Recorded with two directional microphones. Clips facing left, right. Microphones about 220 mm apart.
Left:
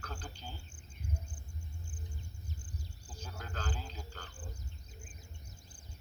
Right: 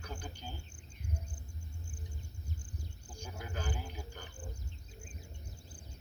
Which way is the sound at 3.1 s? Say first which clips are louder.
Right 2 dB; 10° right (ahead or behind).